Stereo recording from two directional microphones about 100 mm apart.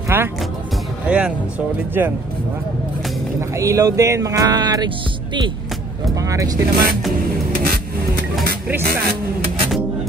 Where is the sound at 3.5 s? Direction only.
30° right (ahead or behind).